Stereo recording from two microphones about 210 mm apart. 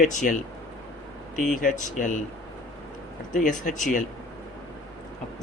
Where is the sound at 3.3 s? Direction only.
40° left (ahead or behind).